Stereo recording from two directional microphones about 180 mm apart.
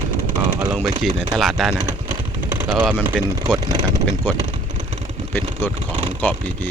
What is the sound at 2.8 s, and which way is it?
Speech, 5° right (ahead or behind).